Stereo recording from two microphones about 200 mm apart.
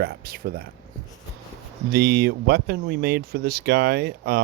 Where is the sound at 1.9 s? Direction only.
50° right (ahead or behind).